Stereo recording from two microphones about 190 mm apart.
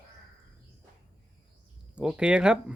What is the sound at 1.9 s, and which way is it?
Speech, 5° right (ahead or behind).